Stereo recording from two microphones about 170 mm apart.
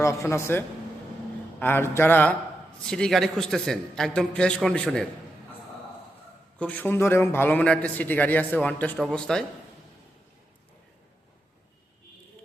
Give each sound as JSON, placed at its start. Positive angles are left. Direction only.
{"t": 0.0, "sound": "a man's voice", "side_deg": 15}
{"t": 6.6, "sound": "a man's voice", "side_deg": 10}